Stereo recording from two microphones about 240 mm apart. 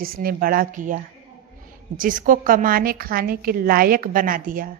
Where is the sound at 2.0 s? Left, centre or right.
Right.